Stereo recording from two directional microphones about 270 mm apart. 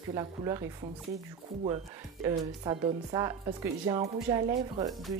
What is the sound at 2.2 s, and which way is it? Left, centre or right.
Speech, centre.